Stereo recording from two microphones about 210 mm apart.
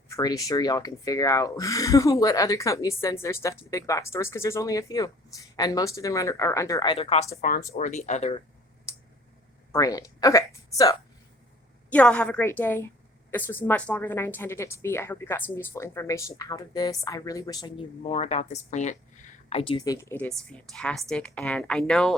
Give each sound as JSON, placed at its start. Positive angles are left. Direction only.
{"t": 0.1, "sound": "speech", "side_deg": 15}
{"t": 8.9, "sound": "a sound", "side_deg": 15}
{"t": 9.7, "sound": "speech", "side_deg": 15}
{"t": 11.9, "sound": "speech", "side_deg": 5}